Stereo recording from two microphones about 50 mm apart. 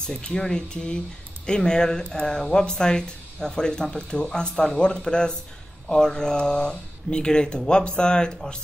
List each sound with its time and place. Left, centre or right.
0.0 s speech: centre